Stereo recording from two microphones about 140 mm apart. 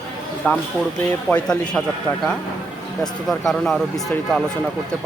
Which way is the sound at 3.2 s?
Centre (ahead or behind).